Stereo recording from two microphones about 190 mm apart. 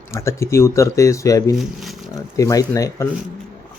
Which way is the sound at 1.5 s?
Centre (ahead or behind).